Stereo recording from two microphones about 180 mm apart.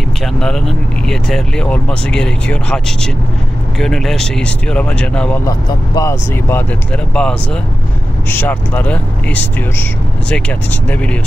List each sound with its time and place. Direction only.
0.2 s speech: 5° left (ahead or behind)
5.5 s speech: 15° left (ahead or behind)
7.2 s speech: 5° left (ahead or behind)